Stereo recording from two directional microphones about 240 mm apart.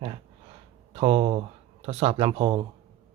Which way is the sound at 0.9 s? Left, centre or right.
Right.